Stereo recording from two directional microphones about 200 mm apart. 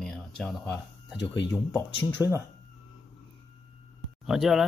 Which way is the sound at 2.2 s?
10° right (ahead or behind).